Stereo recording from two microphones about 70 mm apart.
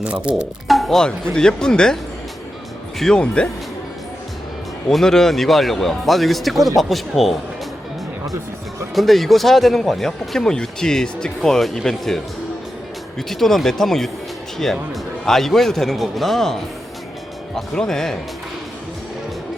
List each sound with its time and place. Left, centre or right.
0.0 s speech: centre
0.7 s speech: centre
3.0 s speech: centre
4.9 s speech: centre
9.0 s speech: centre